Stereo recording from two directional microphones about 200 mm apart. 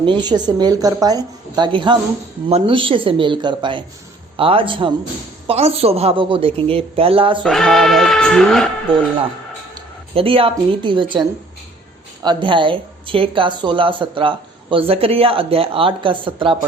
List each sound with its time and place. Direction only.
0.0 s speech: 20° right (ahead or behind)
7.4 s bleat: centre (ahead or behind)
9.7 s speech: 30° right (ahead or behind)